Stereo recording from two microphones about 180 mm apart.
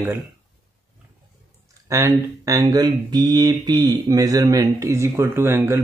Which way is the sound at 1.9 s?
15° right (ahead or behind).